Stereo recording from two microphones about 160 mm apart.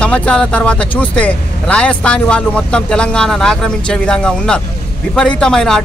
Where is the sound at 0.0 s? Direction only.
5° left (ahead or behind).